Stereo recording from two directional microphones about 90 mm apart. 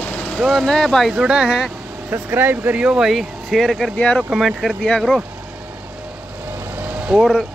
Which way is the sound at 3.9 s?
15° left (ahead or behind).